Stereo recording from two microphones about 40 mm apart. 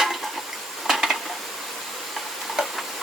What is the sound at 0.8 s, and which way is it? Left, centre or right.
Dishes, centre.